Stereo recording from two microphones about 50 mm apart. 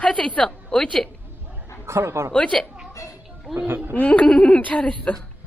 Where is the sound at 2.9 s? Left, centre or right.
Left.